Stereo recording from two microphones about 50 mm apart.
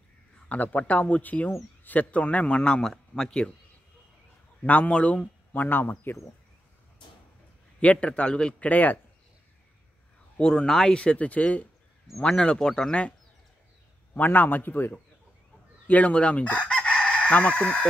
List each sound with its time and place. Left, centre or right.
0.5 s speech: left
4.6 s speech: left
5.5 s speech: left
7.8 s speech: left
8.6 s speech: left
10.3 s speech: centre
12.2 s speech: centre
14.1 s speech: left
15.9 s chicken: left